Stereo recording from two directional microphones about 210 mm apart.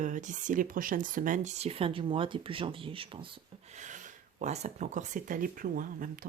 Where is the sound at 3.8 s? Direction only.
35° right (ahead or behind).